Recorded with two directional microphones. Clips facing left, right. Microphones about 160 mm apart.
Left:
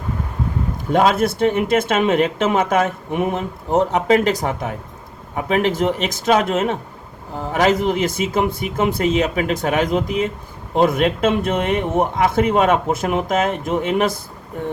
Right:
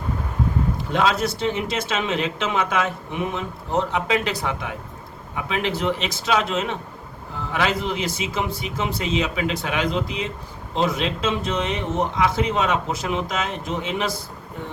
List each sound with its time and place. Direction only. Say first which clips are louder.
0.9 s speech: left 6 dB; 50° left (ahead or behind)